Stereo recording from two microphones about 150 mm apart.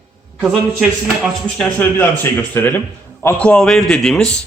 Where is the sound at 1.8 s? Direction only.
10° left (ahead or behind).